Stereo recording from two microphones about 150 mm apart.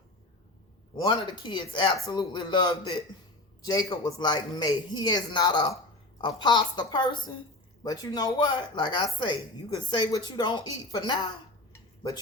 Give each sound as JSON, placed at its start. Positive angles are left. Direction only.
{"t": 1.0, "sound": "speech", "side_deg": 30}
{"t": 11.7, "sound": "dishes", "side_deg": 20}